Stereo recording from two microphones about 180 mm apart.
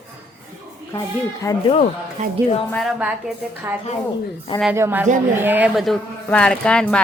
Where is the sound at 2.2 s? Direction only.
40° right (ahead or behind).